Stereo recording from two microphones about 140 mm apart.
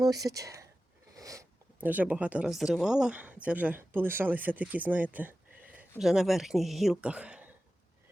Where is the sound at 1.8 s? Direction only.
10° right (ahead or behind).